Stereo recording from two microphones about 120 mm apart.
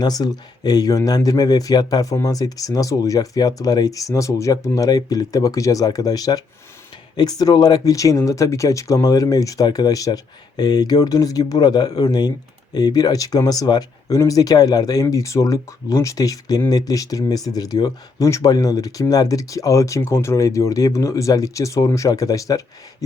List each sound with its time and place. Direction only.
0.0 s speech: 35° left (ahead or behind)